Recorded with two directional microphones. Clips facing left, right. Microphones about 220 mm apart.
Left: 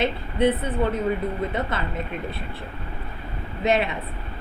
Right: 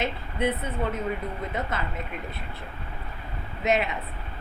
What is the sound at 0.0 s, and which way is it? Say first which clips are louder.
Speech: left 6 dB; 30° left (ahead or behind).